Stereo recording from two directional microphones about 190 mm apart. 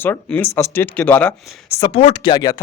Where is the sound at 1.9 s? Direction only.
30° left (ahead or behind).